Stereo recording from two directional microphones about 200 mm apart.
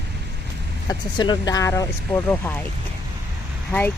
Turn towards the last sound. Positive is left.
turn(degrees=10)  # may be behind; listen again after turning